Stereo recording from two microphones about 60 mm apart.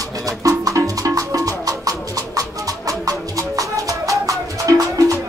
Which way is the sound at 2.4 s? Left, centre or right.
Right.